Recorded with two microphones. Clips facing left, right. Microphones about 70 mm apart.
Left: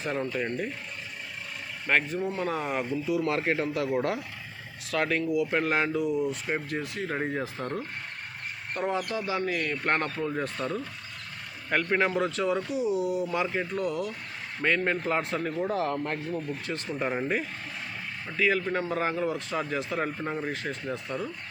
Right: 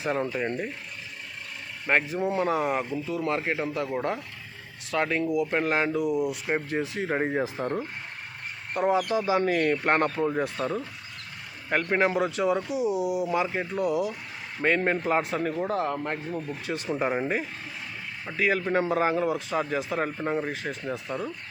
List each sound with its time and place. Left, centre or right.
0.0 s speech: centre
1.9 s speech: centre
2.6 s speech: centre
6.7 s speech: right
9.4 s speech: right
9.7 s speech: centre
18.3 s speech: centre